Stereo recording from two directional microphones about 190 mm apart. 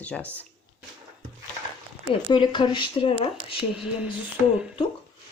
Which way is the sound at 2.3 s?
25° left (ahead or behind).